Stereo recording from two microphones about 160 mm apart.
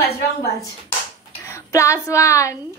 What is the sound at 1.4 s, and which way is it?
Speech, 20° left (ahead or behind).